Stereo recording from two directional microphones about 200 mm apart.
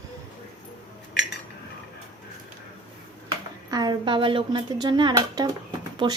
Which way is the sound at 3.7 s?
20° right (ahead or behind).